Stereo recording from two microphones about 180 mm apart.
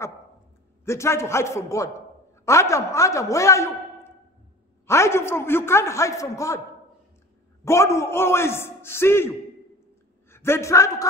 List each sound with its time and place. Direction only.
0.8 s a man's voice: 15° left (ahead or behind)
7.6 s a man's voice: 15° left (ahead or behind)